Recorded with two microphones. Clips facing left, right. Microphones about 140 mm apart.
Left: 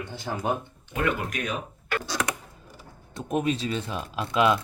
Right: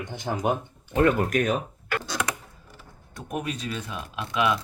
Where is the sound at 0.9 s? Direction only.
40° right (ahead or behind).